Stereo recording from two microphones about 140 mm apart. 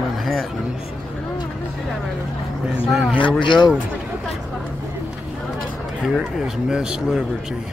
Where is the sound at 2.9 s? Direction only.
Centre (ahead or behind).